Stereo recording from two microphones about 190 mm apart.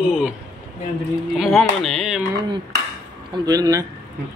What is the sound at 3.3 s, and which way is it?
Speech, 20° right (ahead or behind).